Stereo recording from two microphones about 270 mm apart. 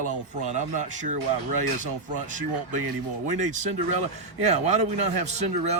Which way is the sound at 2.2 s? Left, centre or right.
Right.